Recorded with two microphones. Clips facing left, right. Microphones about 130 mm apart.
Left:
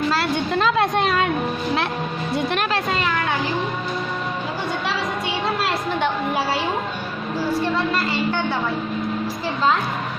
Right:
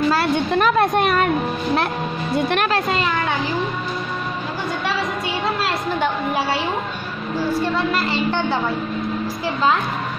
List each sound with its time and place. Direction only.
0.7 s a woman's voice: 50° right (ahead or behind)
2.3 s speech: 55° right (ahead or behind)